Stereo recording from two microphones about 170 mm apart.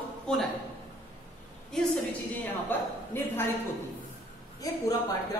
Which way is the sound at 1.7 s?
5° left (ahead or behind).